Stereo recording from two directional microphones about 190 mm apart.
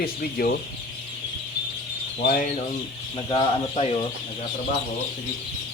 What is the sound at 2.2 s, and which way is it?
Speech, 50° left (ahead or behind).